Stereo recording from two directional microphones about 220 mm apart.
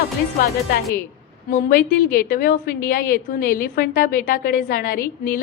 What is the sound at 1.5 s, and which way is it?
A woman's voice, 35° left (ahead or behind).